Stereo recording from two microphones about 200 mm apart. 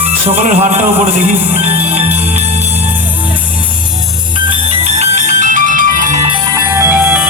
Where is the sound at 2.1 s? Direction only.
30° right (ahead or behind).